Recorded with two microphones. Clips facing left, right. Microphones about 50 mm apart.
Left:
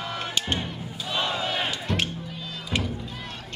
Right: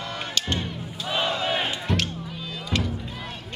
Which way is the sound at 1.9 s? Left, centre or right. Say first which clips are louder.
Right 1 dB; centre.